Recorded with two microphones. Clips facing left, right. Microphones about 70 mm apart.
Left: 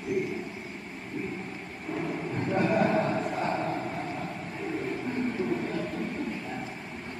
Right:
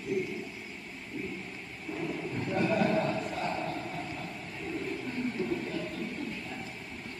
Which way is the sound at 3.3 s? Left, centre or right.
Left.